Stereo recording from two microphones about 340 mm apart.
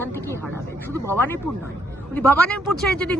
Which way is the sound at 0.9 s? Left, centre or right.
Centre.